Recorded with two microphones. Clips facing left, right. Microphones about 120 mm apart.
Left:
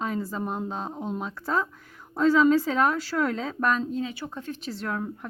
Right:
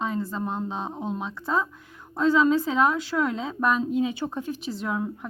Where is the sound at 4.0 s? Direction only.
20° right (ahead or behind).